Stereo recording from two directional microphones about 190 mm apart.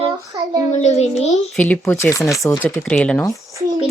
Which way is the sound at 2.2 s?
Centre (ahead or behind).